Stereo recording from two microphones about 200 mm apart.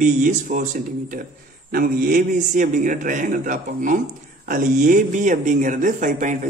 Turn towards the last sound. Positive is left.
turn(degrees=-40)  # may be behind; listen again after turning